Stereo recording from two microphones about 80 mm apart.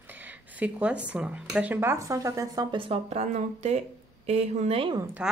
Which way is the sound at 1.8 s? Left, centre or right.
Right.